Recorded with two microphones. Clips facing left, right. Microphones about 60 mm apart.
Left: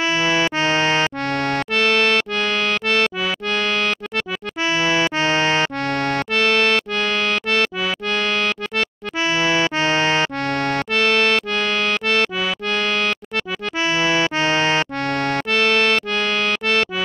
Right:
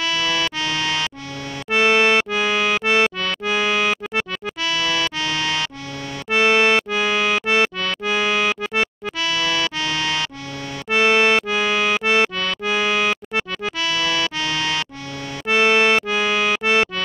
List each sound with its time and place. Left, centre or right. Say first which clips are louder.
0.0 s music: left 3 dB; left
1.3 s music: left 10 dB; left
1.7 s music: right 4 dB; centre
4.6 s music: left 4 dB; left
5.9 s accordion: left 10 dB; left
6.3 s music: right 3 dB; centre
9.2 s music: left 4 dB; left
10.5 s accordion: left 10 dB; left
10.9 s accordion: right 4 dB; centre
12.6 s music: right 3 dB; centre
13.7 s music: left 4 dB; left
15.5 s music: right 3 dB; centre